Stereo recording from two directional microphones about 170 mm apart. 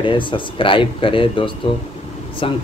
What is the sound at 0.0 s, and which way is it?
Speech, 30° left (ahead or behind).